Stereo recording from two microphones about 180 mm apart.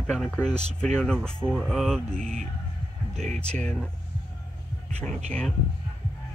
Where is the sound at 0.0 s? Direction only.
5° left (ahead or behind).